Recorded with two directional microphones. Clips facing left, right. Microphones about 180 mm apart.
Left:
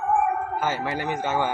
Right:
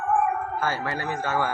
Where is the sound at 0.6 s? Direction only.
20° left (ahead or behind).